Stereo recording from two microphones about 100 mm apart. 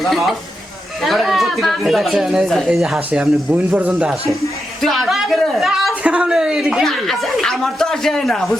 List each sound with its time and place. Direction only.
0.0 s speech: centre (ahead or behind)
3.1 s speech: 15° right (ahead or behind)
3.9 s speech: centre (ahead or behind)